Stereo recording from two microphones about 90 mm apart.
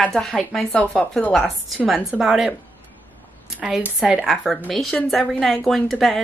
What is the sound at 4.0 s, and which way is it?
A woman's voice, 5° right (ahead or behind).